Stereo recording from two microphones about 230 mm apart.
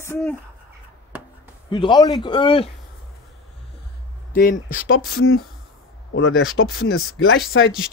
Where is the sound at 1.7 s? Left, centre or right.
Centre.